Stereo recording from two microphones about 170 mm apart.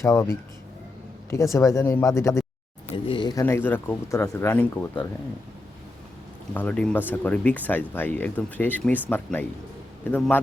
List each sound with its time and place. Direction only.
0.0 s speech: 15° left (ahead or behind)
1.5 s speech: 20° left (ahead or behind)
2.9 s speech: 30° left (ahead or behind)
3.4 s speech: 10° left (ahead or behind)
6.5 s speech: 10° left (ahead or behind)